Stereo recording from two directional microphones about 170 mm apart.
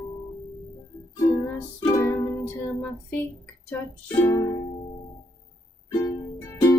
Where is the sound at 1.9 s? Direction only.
15° left (ahead or behind).